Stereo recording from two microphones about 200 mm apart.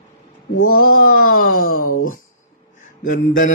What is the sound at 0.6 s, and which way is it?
Speech, 90° left.